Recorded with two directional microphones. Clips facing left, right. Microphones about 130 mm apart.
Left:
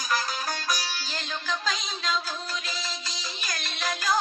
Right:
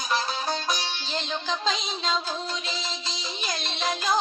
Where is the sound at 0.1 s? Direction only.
25° right (ahead or behind).